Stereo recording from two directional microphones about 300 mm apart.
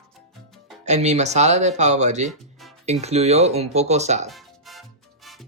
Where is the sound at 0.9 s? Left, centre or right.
Right.